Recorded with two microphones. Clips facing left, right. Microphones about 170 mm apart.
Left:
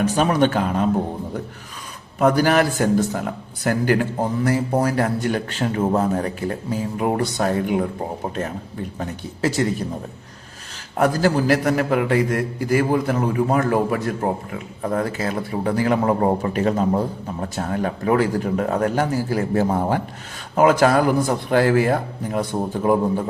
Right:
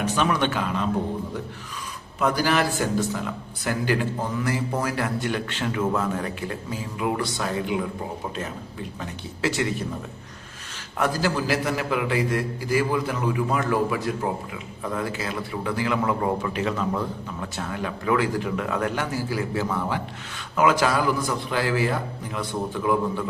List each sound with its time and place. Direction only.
0.1 s a man's voice: 40° left (ahead or behind)
2.1 s a man's voice: 50° left (ahead or behind)
9.0 s speech: 40° left (ahead or behind)
10.9 s a man's voice: 45° left (ahead or behind)